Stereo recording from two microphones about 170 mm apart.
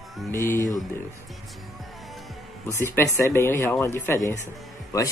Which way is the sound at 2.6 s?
15° left (ahead or behind).